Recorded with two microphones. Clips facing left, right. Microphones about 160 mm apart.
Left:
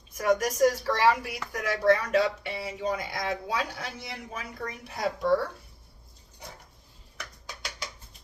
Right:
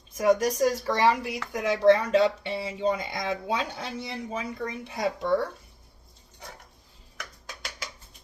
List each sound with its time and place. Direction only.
0.2 s speech: 30° right (ahead or behind)